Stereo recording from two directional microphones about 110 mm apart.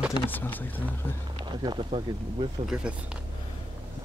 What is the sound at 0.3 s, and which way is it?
Speech, 15° left (ahead or behind).